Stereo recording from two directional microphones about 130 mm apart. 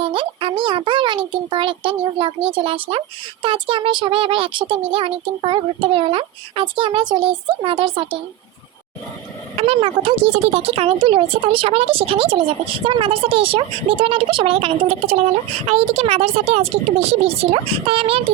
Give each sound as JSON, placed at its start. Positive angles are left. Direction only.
{"t": 0.0, "sound": "a child's voice", "side_deg": -40}
{"t": 9.6, "sound": "speech", "side_deg": -45}